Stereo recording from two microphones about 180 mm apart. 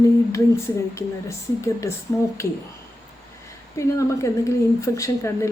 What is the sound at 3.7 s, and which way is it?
A woman's voice, 15° left (ahead or behind).